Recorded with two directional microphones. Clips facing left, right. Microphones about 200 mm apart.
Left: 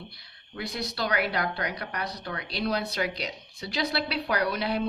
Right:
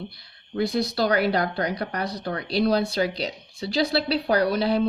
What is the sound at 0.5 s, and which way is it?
Speech, 30° right (ahead or behind).